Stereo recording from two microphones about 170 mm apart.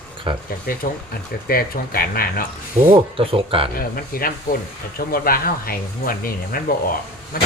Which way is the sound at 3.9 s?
60° left (ahead or behind).